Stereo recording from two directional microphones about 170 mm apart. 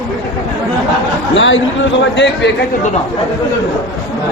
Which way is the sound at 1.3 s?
90° left.